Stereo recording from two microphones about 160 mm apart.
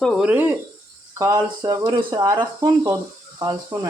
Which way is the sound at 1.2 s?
25° right (ahead or behind).